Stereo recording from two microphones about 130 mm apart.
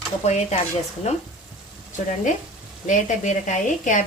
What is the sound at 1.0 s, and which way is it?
Speech, 60° left (ahead or behind).